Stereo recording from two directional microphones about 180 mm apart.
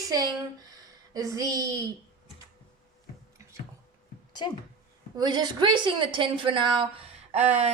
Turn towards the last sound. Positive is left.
turn(degrees=-35)  # may be behind; listen again after turning